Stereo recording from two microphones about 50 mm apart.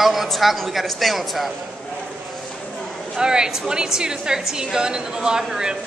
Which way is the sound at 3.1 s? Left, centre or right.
Centre.